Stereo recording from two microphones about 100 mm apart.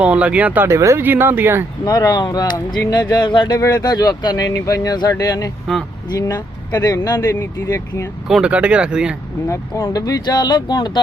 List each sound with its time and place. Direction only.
0.0 s speech: 15° right (ahead or behind)
0.7 s speech: 30° right (ahead or behind)
1.8 s speech: 40° left (ahead or behind)
8.3 s speech: 10° right (ahead or behind)
9.8 s speech: 40° left (ahead or behind)